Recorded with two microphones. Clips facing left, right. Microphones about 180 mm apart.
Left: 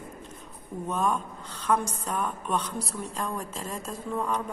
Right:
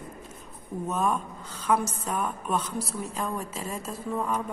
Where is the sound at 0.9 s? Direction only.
5° right (ahead or behind).